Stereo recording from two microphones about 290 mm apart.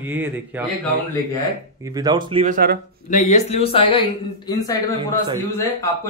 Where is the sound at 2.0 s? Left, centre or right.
Centre; by 2.8 s right.